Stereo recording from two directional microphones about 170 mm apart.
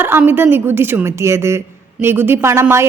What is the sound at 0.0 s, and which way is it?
Speech, 10° right (ahead or behind).